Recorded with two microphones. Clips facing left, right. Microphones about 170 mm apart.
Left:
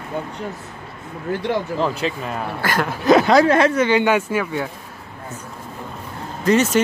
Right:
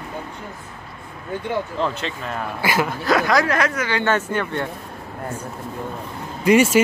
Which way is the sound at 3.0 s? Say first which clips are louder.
Left 7 dB; 25° left (ahead or behind).